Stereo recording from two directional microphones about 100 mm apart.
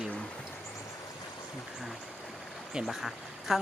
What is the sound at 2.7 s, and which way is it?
Speech, 5° right (ahead or behind).